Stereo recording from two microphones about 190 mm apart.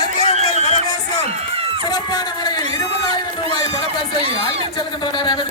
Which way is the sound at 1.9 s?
20° left (ahead or behind).